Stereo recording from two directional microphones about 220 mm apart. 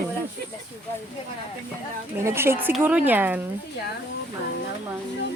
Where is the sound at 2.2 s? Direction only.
10° right (ahead or behind).